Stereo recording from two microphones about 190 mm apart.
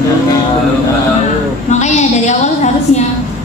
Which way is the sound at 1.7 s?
40° left (ahead or behind).